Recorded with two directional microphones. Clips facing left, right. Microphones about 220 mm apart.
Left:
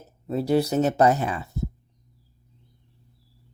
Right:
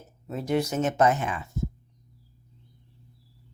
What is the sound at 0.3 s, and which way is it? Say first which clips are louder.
Speech: left 5 dB; 35° left (ahead or behind).